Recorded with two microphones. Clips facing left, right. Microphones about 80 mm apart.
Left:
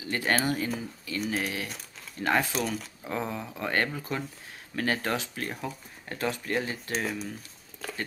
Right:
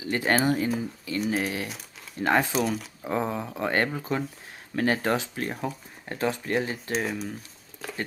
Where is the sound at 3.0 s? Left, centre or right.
Right; by 7.3 s centre.